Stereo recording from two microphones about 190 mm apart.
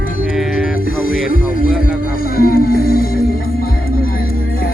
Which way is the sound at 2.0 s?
50° left (ahead or behind).